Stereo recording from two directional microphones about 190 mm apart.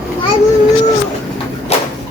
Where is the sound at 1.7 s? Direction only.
35° left (ahead or behind).